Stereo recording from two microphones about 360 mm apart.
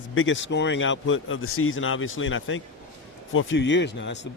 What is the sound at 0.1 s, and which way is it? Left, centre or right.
Speech, left.